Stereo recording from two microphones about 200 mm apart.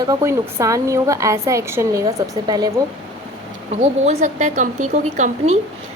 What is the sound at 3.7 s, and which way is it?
Speech, 35° right (ahead or behind).